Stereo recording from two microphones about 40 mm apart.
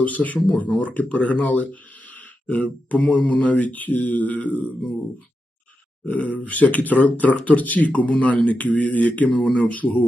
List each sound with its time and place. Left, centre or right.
0.0 s speech: left
6.1 s speech: left